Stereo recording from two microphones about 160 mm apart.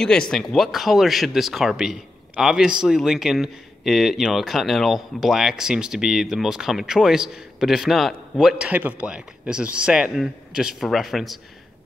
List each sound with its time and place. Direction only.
0.3 s speech: 5° left (ahead or behind)